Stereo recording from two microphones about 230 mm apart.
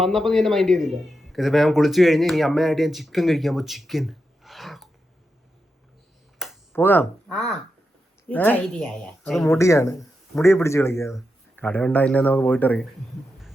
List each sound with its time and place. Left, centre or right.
0.0 s a man's voice: centre
6.4 s a sound: centre
6.7 s a man's voice: centre
9.5 s speech: centre